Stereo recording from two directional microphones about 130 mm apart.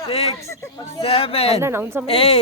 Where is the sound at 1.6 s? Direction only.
20° right (ahead or behind).